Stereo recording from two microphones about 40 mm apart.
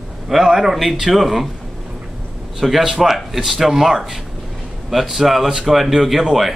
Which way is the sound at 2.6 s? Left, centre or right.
Centre.